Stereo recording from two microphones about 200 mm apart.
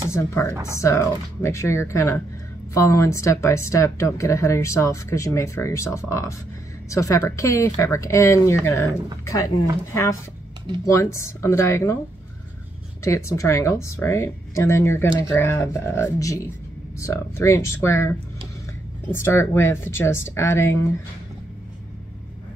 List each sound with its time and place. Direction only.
0.1 s speech: 10° left (ahead or behind)
10.9 s speech: 15° left (ahead or behind)
13.0 s speech: 15° left (ahead or behind)
19.1 s speech: 10° left (ahead or behind)